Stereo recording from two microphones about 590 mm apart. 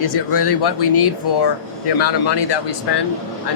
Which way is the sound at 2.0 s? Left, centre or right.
Left.